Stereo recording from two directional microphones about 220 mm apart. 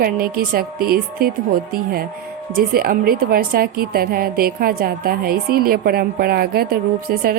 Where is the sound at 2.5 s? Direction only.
40° right (ahead or behind).